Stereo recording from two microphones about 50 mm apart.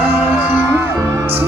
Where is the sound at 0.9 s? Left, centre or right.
Right.